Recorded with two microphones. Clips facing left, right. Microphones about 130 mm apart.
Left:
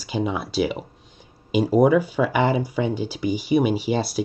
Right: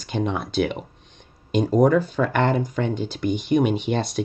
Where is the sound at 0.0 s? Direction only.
5° left (ahead or behind).